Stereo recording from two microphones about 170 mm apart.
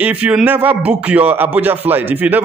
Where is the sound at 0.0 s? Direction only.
5° right (ahead or behind).